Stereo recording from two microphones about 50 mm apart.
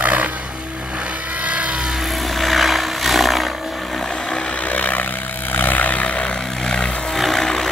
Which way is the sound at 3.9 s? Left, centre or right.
Centre.